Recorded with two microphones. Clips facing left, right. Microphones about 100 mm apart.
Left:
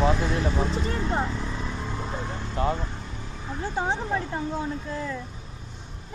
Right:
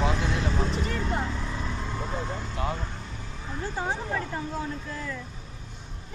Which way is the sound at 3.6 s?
20° left (ahead or behind).